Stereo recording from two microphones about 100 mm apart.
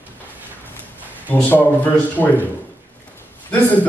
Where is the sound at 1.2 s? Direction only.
15° left (ahead or behind).